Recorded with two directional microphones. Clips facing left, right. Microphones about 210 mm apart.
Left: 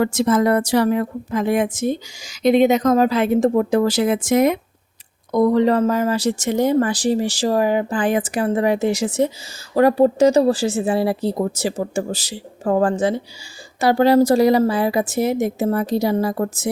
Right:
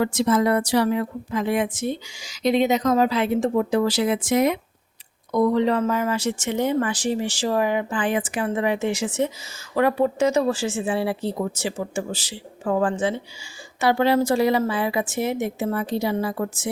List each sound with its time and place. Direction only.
0.0 s a woman's voice: 45° left (ahead or behind)